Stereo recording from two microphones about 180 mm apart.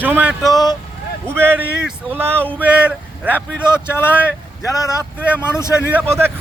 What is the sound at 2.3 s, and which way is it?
Speech, 10° left (ahead or behind).